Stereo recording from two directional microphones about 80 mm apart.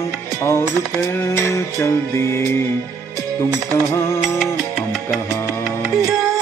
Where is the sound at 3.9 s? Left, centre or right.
Left.